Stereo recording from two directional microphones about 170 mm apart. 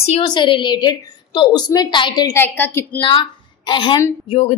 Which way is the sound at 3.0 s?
25° left (ahead or behind).